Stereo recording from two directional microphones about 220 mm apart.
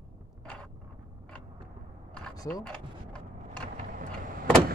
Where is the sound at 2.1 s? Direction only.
5° left (ahead or behind).